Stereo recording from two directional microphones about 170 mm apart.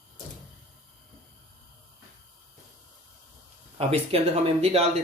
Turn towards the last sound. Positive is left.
turn(degrees=-35)  # may be behind; listen again after turning